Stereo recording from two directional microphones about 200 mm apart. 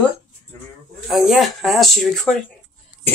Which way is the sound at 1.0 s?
Centre (ahead or behind).